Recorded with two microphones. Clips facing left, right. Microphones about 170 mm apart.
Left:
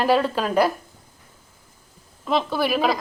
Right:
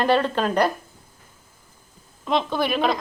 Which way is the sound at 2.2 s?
5° left (ahead or behind).